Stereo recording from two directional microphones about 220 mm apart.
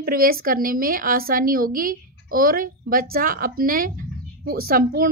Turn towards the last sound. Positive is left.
turn(degrees=-40)  # may be behind; listen again after turning